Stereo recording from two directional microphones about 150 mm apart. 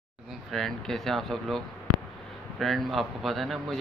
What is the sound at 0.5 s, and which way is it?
Speech, centre (ahead or behind).